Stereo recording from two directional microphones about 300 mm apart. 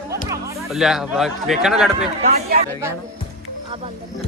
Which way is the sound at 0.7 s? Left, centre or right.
Centre.